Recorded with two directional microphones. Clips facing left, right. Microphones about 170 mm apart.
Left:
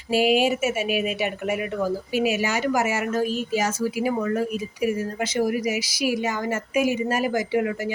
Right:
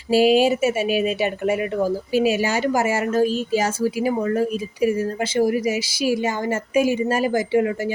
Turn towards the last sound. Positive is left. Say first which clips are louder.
# right 4 dB
turn(degrees=-30)  # may be behind; listen again after turning